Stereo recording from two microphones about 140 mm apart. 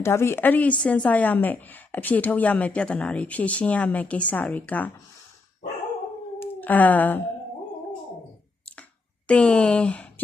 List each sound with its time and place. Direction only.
0.0 s a woman's voice: 20° left (ahead or behind)
6.4 s a sound: 10° left (ahead or behind)
9.2 s speech: 10° left (ahead or behind)